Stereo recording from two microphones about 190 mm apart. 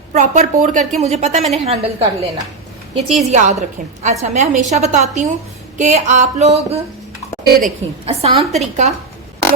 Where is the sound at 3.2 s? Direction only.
35° right (ahead or behind).